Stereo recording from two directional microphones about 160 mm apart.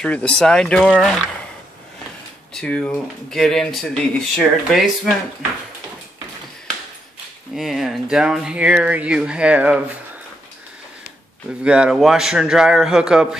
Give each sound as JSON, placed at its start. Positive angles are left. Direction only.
{"t": 0.0, "sound": "speech", "side_deg": 5}
{"t": 2.6, "sound": "speech", "side_deg": 5}
{"t": 7.5, "sound": "speech", "side_deg": 0}
{"t": 11.6, "sound": "speech", "side_deg": -5}